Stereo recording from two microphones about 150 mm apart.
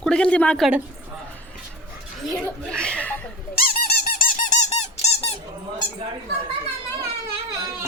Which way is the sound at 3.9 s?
75° left (ahead or behind).